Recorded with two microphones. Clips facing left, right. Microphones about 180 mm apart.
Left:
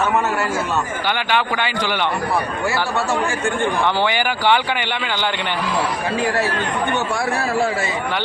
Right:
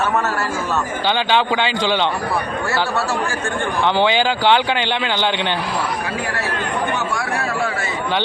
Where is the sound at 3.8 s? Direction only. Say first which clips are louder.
Right 7 dB; 20° right (ahead or behind).